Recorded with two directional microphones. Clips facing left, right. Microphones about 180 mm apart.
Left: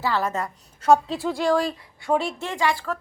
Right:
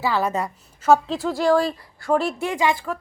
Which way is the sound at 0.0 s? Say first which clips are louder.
Right 2 dB; 15° right (ahead or behind).